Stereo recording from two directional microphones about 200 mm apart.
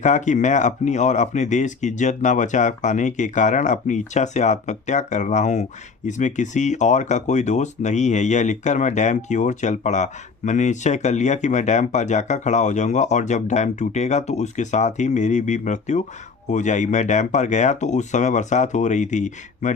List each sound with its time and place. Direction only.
0.0 s speech: 35° left (ahead or behind)